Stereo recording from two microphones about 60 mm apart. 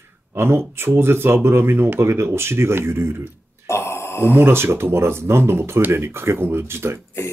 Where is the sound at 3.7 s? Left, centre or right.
Left.